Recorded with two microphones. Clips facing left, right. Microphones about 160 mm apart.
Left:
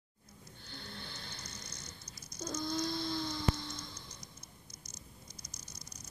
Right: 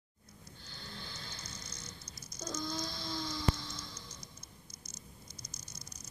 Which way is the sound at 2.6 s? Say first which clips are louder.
Left 5 dB; 55° left (ahead or behind).